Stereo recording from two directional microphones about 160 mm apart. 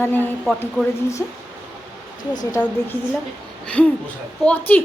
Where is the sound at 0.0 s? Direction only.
10° left (ahead or behind).